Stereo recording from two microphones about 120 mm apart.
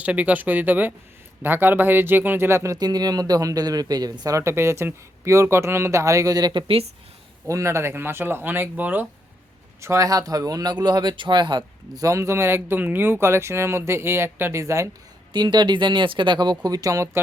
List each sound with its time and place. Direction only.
0.0 s speech: 10° right (ahead or behind)
2.7 s speech: 35° right (ahead or behind)
7.4 s speech: 25° right (ahead or behind)
9.8 s speech: 25° right (ahead or behind)
12.0 s speech: 25° right (ahead or behind)
15.3 s speech: 40° right (ahead or behind)